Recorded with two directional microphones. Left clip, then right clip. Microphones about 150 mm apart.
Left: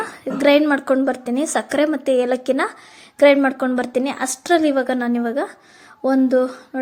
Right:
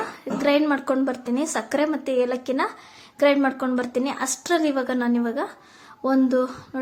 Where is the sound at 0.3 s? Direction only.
30° left (ahead or behind).